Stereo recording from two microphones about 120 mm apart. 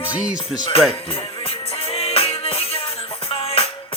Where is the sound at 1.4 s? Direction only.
50° left (ahead or behind).